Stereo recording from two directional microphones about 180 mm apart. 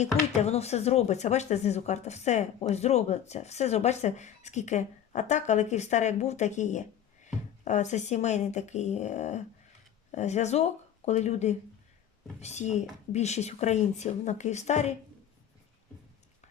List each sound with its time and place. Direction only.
0.0 s speech: 40° left (ahead or behind)